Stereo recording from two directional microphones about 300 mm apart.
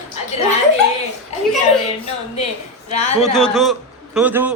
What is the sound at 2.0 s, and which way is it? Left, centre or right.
Speech, left.